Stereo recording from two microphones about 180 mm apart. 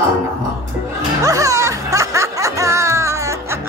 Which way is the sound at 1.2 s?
20° right (ahead or behind).